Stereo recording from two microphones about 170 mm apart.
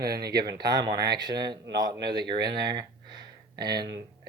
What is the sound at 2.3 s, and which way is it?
Speech, 75° right (ahead or behind).